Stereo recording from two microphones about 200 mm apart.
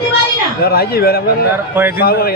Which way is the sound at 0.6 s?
50° left (ahead or behind).